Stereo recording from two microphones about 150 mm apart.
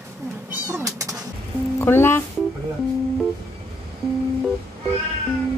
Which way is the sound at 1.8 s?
15° left (ahead or behind).